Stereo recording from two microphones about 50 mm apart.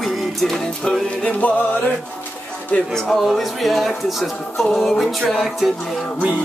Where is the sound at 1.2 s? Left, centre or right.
Left.